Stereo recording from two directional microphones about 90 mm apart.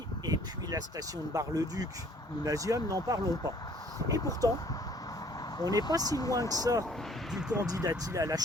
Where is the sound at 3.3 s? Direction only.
45° left (ahead or behind).